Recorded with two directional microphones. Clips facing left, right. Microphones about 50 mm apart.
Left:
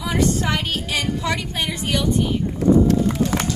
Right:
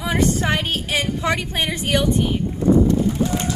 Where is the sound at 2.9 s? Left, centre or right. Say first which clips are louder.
Even; left.